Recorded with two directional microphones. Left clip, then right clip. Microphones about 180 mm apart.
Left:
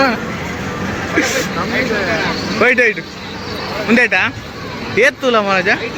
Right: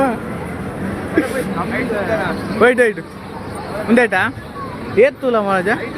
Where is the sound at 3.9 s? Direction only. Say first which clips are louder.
Left 1 dB; 20° right (ahead or behind).